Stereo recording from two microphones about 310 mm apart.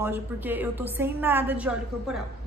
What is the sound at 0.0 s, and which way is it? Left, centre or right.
A woman's voice, centre.